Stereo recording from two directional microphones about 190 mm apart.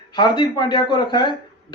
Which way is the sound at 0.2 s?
25° left (ahead or behind).